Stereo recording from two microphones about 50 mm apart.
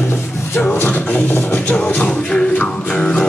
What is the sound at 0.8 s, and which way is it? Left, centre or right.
Beatboxing, left.